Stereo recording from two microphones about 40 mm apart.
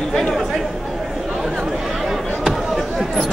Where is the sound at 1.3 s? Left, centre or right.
Centre.